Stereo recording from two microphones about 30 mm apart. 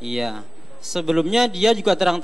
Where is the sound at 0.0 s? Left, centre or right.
Centre.